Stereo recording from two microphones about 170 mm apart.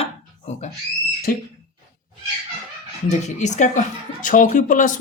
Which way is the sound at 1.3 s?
55° left (ahead or behind).